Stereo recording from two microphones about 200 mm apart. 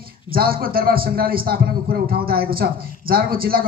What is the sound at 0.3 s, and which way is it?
Speech, 45° right (ahead or behind).